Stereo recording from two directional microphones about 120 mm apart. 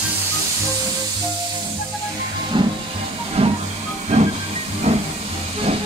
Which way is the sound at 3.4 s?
55° right (ahead or behind).